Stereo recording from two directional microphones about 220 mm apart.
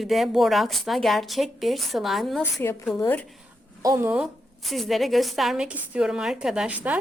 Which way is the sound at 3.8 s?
10° right (ahead or behind).